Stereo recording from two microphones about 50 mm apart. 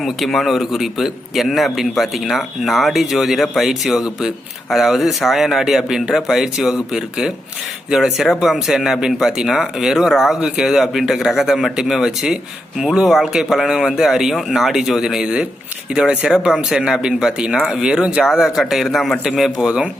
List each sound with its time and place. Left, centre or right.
0.0 s a man's voice: centre
19.4 s speech: centre